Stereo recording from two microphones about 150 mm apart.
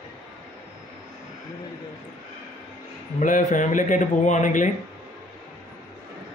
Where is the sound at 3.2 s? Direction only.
60° left (ahead or behind).